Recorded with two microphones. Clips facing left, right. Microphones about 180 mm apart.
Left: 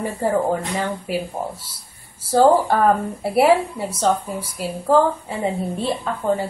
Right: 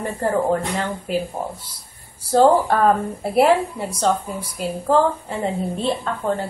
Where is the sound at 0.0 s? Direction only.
5° left (ahead or behind).